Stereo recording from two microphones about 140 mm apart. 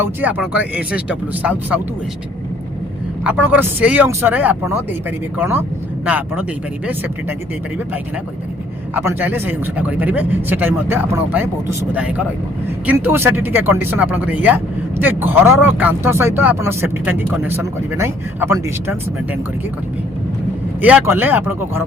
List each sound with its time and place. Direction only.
0.0 s speech: 10° right (ahead or behind)
3.2 s speech: 10° right (ahead or behind)
9.0 s speech: 15° right (ahead or behind)
20.8 s speech: 15° right (ahead or behind)